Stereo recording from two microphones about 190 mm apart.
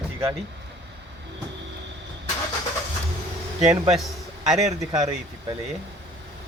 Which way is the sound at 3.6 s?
35° right (ahead or behind).